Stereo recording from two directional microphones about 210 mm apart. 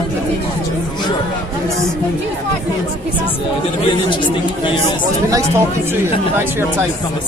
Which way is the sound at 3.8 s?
25° left (ahead or behind).